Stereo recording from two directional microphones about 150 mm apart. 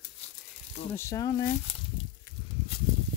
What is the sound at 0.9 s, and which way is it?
Speech, 20° left (ahead or behind).